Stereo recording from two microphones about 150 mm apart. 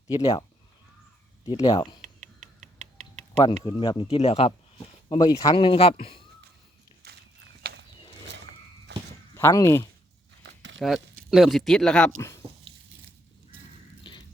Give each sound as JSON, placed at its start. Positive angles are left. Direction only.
{"t": 0.1, "sound": "speech", "side_deg": 30}
{"t": 1.5, "sound": "speech", "side_deg": 25}
{"t": 3.6, "sound": "speech", "side_deg": 35}
{"t": 5.0, "sound": "speech", "side_deg": 30}
{"t": 5.5, "sound": "speech", "side_deg": 35}
{"t": 9.3, "sound": "speech", "side_deg": 20}
{"t": 10.8, "sound": "speech", "side_deg": 0}
{"t": 14.0, "sound": "a sound", "side_deg": 30}